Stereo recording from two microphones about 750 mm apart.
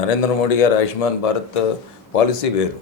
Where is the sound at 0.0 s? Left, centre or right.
Left.